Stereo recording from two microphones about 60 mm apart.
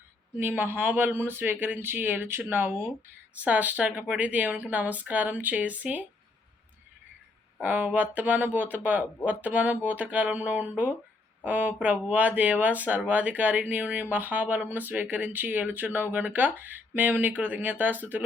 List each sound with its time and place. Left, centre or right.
0.3 s speech: right
3.4 s speech: right
7.6 s speech: right